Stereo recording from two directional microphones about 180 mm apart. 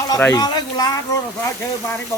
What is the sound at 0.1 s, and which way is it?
Speech, 20° left (ahead or behind).